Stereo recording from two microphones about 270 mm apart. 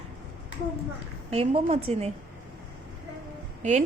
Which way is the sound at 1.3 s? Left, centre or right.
Right.